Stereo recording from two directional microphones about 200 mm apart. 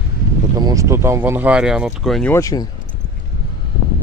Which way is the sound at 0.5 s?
15° right (ahead or behind).